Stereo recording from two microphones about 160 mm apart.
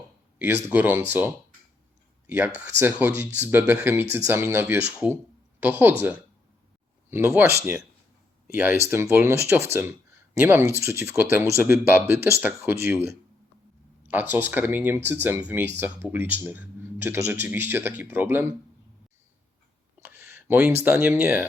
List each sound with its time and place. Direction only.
0.3 s speech: 10° right (ahead or behind)
2.2 s speech: 10° right (ahead or behind)
14.1 s speech: 10° right (ahead or behind)
20.0 s a sound: 10° right (ahead or behind)
20.8 s speech: 10° right (ahead or behind)